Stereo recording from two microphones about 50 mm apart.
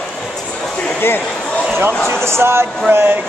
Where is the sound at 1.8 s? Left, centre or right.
Right.